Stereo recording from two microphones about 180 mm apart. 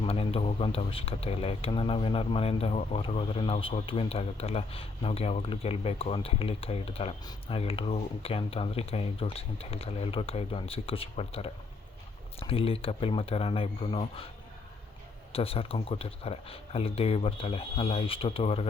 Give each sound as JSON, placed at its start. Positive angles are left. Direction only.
{"t": 0.0, "sound": "speech", "side_deg": 30}
{"t": 15.3, "sound": "speech", "side_deg": 30}